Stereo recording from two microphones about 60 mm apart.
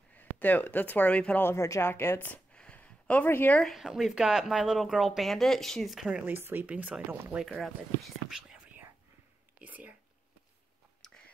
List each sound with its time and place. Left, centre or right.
0.1 s speech: left
1.4 s speech: left
2.5 s a sound: centre
3.3 s speech: left
3.6 s speech: centre
6.1 s speech: right
7.4 s speech: centre
8.3 s whispering: centre
9.6 s a sound: right